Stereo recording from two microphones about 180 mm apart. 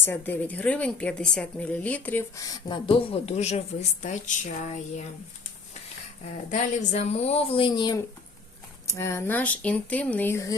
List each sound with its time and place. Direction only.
0.0 s a woman's voice: 10° left (ahead or behind); by 5.0 s 40° left (ahead or behind)
6.5 s a woman's voice: 40° left (ahead or behind); by 10.5 s 15° left (ahead or behind)